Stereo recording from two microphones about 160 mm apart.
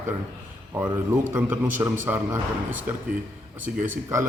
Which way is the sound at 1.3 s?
10° right (ahead or behind).